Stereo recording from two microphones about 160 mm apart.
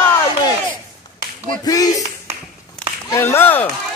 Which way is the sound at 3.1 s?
15° left (ahead or behind).